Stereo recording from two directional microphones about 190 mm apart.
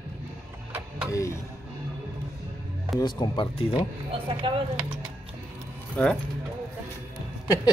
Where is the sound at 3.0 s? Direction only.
25° left (ahead or behind).